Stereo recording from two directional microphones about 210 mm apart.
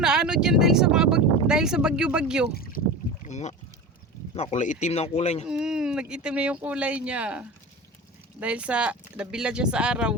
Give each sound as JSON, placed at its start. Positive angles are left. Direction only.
{"t": 0.0, "sound": "speech", "side_deg": -5}
{"t": 3.2, "sound": "speech", "side_deg": 35}
{"t": 5.5, "sound": "speech", "side_deg": -5}